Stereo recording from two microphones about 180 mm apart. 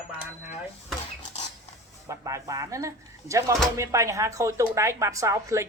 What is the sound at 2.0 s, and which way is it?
Speech, 15° right (ahead or behind).